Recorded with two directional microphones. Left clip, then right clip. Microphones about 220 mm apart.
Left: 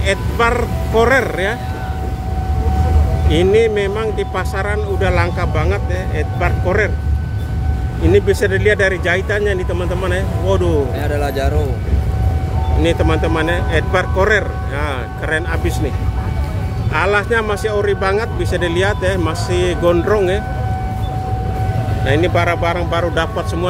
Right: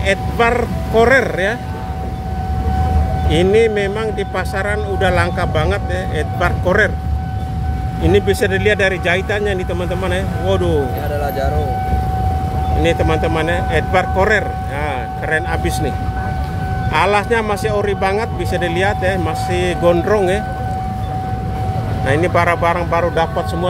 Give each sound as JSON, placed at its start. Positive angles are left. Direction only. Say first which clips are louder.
{"t": 0.0, "sound": "speech", "louder": "right 1 dB", "side_deg": 0}
{"t": 3.3, "sound": "speech", "louder": "even", "side_deg": -5}
{"t": 8.0, "sound": "speech", "louder": "left 1 dB", "side_deg": -5}
{"t": 11.2, "sound": "speech", "louder": "right 2 dB", "side_deg": 40}
{"t": 12.8, "sound": "speech", "louder": "even", "side_deg": 0}
{"t": 16.9, "sound": "speech", "louder": "right 1 dB", "side_deg": -10}
{"t": 22.0, "sound": "speech", "louder": "right 1 dB", "side_deg": 0}